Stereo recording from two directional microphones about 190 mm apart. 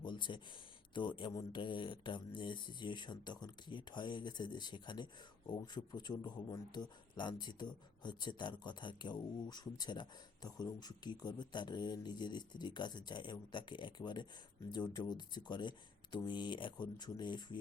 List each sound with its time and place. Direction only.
0.0 s speech: 25° left (ahead or behind)